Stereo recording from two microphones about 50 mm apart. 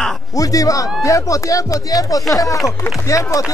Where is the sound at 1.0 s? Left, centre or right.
Left.